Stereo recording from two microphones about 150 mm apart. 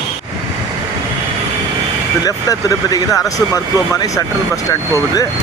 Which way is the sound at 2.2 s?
25° left (ahead or behind).